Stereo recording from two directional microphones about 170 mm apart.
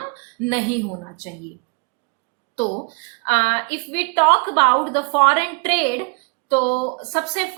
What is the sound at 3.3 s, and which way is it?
A woman's voice, 35° left (ahead or behind).